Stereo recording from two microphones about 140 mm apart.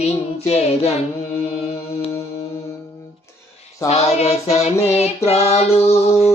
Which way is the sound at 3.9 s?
50° left (ahead or behind).